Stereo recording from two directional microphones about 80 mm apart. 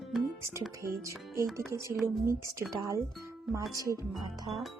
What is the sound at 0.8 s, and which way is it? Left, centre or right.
Speech, right.